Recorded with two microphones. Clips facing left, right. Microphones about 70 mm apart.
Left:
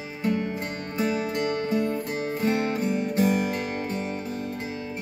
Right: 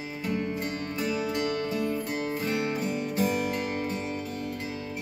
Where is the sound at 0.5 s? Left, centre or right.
Left.